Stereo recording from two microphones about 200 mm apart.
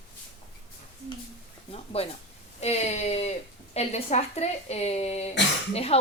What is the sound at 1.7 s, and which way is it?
A woman's voice, 30° left (ahead or behind).